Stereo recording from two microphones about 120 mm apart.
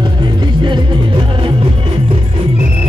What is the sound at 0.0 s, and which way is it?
Music, 40° right (ahead or behind).